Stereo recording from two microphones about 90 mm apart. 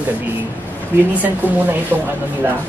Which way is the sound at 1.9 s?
20° right (ahead or behind).